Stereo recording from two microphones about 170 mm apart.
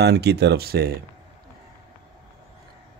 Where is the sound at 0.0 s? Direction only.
75° right (ahead or behind).